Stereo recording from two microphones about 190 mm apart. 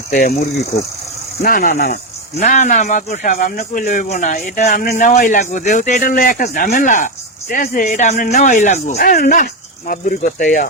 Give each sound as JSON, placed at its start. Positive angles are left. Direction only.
{"t": 0.1, "sound": "a man's voice", "side_deg": 50}
{"t": 2.4, "sound": "a man's voice", "side_deg": 40}